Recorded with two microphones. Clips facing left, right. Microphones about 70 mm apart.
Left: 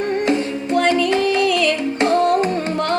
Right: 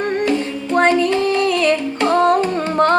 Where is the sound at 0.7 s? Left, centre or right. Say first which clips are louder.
Right 2 dB; right.